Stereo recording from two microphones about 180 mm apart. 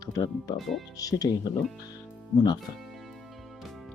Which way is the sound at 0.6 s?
Centre (ahead or behind).